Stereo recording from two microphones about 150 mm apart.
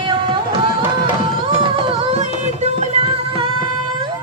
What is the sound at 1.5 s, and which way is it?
Music, 40° right (ahead or behind).